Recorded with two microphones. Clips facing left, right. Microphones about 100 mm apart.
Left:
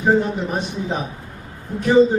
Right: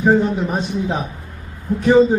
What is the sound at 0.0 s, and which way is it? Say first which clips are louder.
A man's voice: right 2 dB; 10° right (ahead or behind).